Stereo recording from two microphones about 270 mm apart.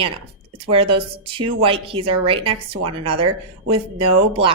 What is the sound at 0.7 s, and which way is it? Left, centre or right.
Speech, centre.